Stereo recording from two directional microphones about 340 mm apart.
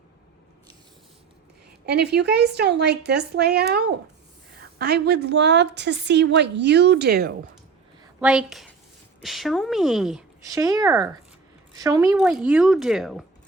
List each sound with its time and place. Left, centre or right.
1.9 s a woman's voice: right
8.2 s speech: centre